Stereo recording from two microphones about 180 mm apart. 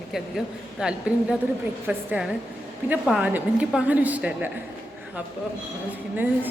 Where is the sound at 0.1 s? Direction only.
Centre (ahead or behind).